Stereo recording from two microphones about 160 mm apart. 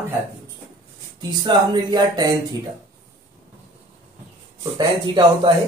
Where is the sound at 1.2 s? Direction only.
25° right (ahead or behind).